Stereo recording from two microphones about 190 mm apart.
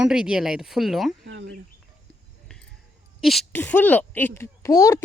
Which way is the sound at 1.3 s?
65° right (ahead or behind).